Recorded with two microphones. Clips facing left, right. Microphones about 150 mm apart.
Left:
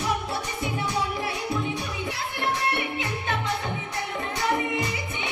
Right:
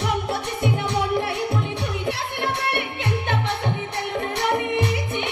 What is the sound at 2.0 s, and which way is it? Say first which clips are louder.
Music: right 2 dB; 65° right (ahead or behind).